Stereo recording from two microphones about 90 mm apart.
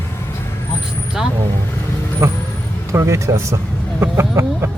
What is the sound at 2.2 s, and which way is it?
Vehicle, 35° right (ahead or behind).